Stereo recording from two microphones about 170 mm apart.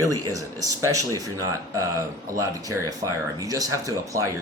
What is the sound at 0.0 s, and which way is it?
Speech, 20° right (ahead or behind).